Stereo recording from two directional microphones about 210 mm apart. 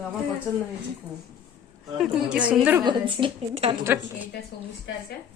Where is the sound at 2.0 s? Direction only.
5° right (ahead or behind).